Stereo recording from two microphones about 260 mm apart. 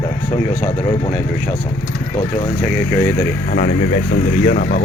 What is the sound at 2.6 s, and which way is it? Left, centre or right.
Speech, centre.